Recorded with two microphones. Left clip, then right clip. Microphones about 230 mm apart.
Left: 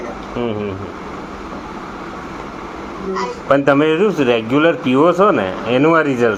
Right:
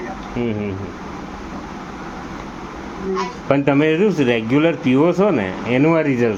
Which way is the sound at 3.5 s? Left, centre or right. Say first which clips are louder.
Left 3 dB; right.